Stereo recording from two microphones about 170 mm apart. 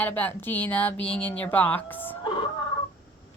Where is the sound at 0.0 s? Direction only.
10° left (ahead or behind).